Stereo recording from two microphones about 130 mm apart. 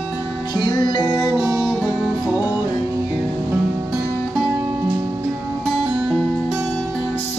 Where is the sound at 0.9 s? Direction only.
35° left (ahead or behind).